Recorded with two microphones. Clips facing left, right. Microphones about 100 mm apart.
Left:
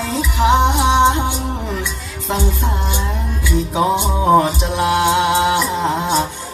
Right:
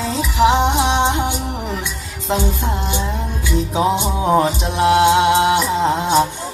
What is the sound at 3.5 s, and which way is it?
Music, 20° right (ahead or behind).